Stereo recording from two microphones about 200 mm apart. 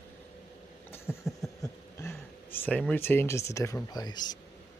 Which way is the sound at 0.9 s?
15° left (ahead or behind).